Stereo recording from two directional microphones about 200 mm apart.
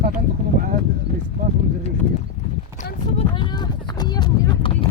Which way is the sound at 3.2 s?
25° left (ahead or behind).